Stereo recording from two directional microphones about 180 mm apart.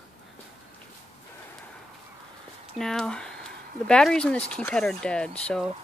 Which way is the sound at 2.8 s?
5° left (ahead or behind).